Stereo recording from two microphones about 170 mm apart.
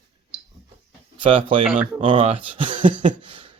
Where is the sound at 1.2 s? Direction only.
30° right (ahead or behind).